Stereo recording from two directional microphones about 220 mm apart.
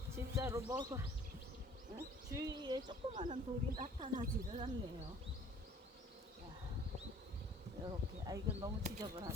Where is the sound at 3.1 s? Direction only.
35° right (ahead or behind).